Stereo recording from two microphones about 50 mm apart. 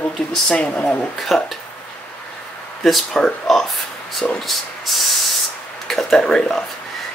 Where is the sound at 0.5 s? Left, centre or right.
Left.